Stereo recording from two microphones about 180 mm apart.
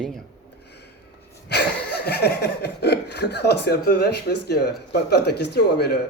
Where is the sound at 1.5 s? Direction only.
65° left (ahead or behind).